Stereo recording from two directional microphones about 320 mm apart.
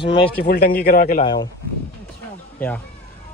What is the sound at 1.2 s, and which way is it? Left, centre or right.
Speech, centre.